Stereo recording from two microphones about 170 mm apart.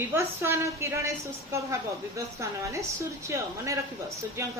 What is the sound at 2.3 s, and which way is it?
Speech, 20° right (ahead or behind).